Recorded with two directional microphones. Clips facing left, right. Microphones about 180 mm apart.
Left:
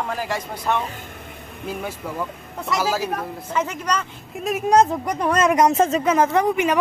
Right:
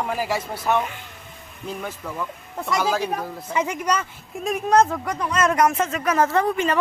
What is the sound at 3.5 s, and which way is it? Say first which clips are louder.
Speech: right 1 dB; 10° right (ahead or behind).